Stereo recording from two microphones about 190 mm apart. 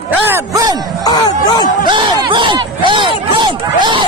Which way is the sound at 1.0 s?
20° left (ahead or behind).